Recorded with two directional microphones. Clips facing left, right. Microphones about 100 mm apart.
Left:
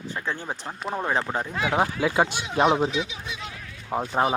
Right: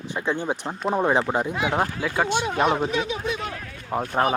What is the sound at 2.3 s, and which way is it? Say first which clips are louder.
Speech: right 9 dB; 55° right (ahead or behind).